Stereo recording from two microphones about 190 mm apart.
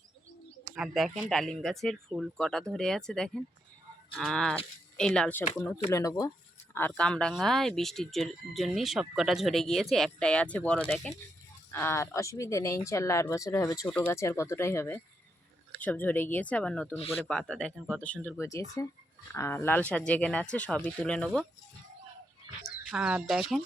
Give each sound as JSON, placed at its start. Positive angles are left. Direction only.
{"t": 0.8, "sound": "speech", "side_deg": 0}
{"t": 22.9, "sound": "speech", "side_deg": -5}